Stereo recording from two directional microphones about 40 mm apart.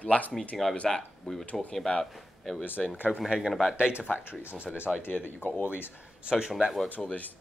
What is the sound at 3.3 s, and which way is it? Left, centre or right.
Speech, centre.